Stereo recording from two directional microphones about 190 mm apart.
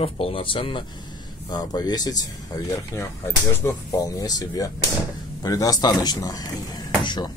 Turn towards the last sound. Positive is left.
turn(degrees=25)  # may be behind; listen again after turning